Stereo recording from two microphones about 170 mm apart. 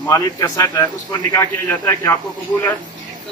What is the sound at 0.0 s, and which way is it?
A man's voice, 20° left (ahead or behind).